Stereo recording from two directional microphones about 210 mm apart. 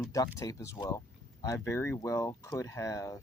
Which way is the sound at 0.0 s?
15° left (ahead or behind).